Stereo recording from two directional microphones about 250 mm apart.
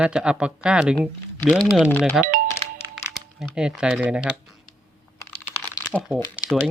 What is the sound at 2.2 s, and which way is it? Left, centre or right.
Music, right.